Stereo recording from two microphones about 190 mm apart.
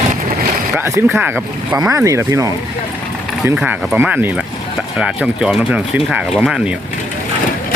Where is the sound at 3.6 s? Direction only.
10° right (ahead or behind).